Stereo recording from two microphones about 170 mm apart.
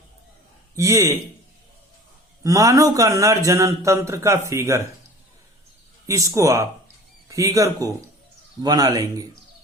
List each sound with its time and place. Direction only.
0.8 s a man's voice: 15° right (ahead or behind)
2.4 s speech: 20° right (ahead or behind)
6.1 s speech: 20° right (ahead or behind)